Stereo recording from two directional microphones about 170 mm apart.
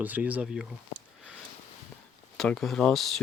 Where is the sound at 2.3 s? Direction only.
5° left (ahead or behind).